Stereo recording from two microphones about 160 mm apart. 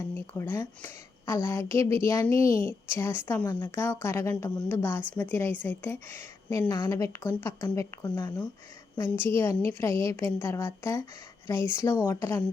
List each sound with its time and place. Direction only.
0.1 s a woman's voice: 15° left (ahead or behind)
6.7 s speech: 25° left (ahead or behind)
9.0 s a woman's voice: 15° left (ahead or behind)